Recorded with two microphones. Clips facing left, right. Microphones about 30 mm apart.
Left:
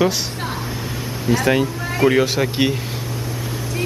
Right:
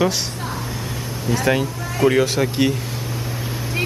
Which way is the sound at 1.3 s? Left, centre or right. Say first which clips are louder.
Left 2 dB; centre.